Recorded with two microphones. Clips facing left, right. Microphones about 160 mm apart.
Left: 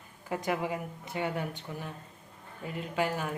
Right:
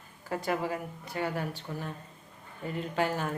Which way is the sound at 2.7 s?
5° left (ahead or behind).